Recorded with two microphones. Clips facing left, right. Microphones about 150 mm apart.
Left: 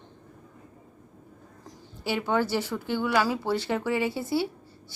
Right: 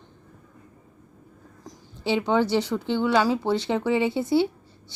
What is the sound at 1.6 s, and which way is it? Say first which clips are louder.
A woman's voice: right 4 dB; 20° right (ahead or behind).